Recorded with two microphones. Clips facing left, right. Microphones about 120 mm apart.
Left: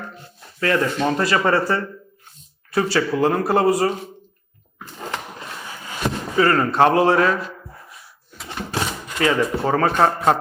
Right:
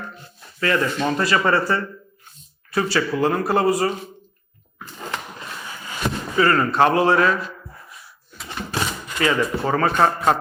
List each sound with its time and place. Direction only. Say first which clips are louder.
0.0 s speech: even; 45° left (ahead or behind)
1.5 s speech: left 1 dB; 45° left (ahead or behind)
4.8 s a sound: left 1 dB; 45° left (ahead or behind)
7.6 s drawer open or close: left 1 dB; 40° left (ahead or behind)